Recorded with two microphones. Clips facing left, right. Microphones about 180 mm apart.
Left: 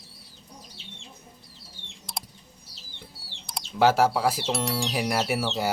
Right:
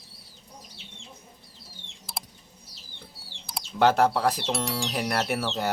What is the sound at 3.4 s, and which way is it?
Speech, centre (ahead or behind).